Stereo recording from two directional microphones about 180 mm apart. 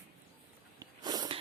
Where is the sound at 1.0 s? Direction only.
20° right (ahead or behind).